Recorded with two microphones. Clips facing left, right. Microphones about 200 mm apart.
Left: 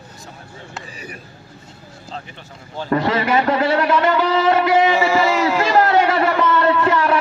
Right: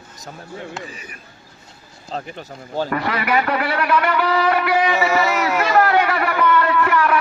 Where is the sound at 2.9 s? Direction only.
25° left (ahead or behind).